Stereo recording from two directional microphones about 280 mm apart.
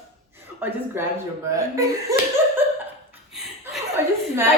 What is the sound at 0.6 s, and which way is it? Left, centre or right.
Speech, centre.